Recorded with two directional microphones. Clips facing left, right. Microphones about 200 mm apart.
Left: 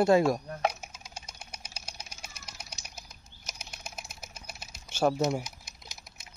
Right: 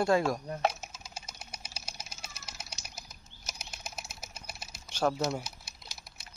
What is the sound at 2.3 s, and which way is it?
Bird flight, 5° right (ahead or behind).